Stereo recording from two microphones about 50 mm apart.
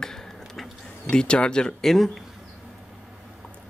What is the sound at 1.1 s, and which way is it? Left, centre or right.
Speech, centre.